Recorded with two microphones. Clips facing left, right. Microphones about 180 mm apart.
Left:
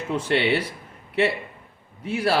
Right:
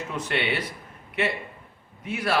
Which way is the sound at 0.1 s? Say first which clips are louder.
Left 7 dB; 30° left (ahead or behind).